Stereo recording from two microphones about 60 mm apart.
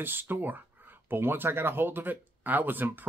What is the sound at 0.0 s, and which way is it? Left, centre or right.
Speech, right.